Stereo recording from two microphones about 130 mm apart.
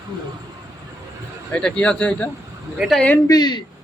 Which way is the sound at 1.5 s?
10° left (ahead or behind).